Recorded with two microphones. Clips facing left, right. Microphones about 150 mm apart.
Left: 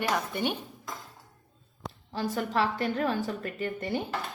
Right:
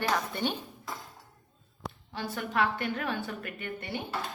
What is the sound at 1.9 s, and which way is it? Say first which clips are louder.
A woman's voice: left 5 dB; 40° left (ahead or behind).